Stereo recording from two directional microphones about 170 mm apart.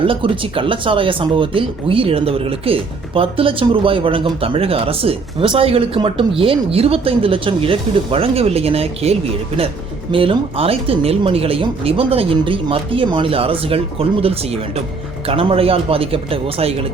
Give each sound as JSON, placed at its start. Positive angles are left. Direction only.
{"t": 0.0, "sound": "speech", "side_deg": -30}